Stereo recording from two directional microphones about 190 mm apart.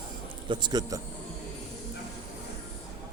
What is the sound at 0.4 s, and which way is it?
Speech, 25° right (ahead or behind).